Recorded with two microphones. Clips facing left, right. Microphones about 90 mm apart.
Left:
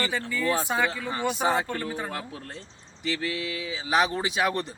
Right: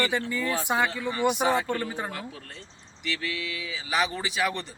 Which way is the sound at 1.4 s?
25° left (ahead or behind).